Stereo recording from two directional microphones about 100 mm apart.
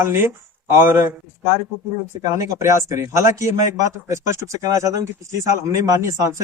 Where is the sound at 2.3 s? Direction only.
30° right (ahead or behind).